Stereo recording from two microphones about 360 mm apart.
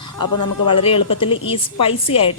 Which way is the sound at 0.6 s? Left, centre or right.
Centre.